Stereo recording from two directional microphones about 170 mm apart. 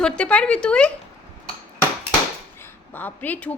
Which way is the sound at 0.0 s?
5° left (ahead or behind).